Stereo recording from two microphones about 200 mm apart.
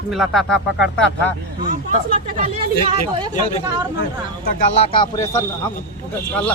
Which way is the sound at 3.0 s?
35° left (ahead or behind).